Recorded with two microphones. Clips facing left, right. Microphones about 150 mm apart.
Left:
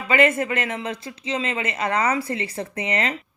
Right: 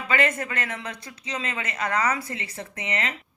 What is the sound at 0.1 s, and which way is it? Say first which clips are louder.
Speech: left 6 dB; 20° left (ahead or behind).